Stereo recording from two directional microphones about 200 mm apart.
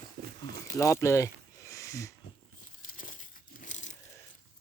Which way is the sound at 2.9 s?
40° left (ahead or behind).